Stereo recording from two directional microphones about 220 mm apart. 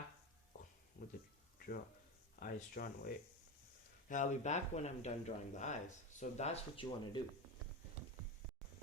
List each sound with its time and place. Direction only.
1.0 s a sound: 35° left (ahead or behind)
2.4 s speech: 40° left (ahead or behind)
4.1 s speech: 35° left (ahead or behind)